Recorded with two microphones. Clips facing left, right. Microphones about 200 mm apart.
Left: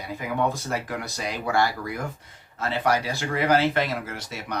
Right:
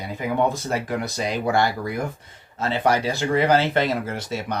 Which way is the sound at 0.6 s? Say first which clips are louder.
Right 4 dB; 20° right (ahead or behind).